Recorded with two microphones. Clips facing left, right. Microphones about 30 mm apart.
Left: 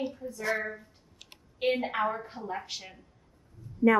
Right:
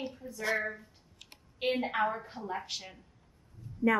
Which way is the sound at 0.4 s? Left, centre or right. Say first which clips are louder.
Left 1 dB; right.